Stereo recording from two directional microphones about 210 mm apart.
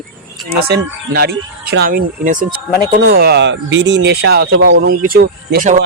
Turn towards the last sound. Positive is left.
turn(degrees=-40)  # may be behind; listen again after turning